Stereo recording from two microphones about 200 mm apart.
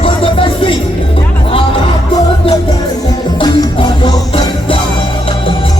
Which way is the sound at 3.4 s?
25° left (ahead or behind).